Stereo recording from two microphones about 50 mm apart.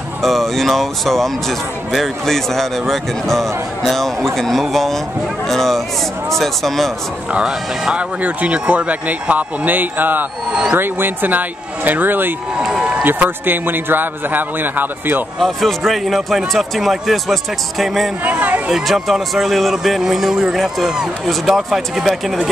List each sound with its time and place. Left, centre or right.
0.2 s speech: centre
7.4 s speech: centre
8.2 s a man's voice: right
10.5 s speech: centre
10.8 s a man's voice: right
12.5 s speech: centre
13.0 s a man's voice: right
15.3 s speech: centre
18.2 s a sound: right
18.7 s speech: centre